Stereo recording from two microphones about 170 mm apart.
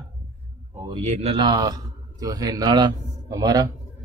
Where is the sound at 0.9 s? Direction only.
35° right (ahead or behind).